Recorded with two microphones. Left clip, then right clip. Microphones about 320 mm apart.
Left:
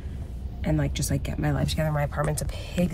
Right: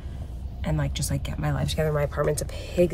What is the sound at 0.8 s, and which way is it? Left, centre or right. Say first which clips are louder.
Speech: left 1 dB; centre.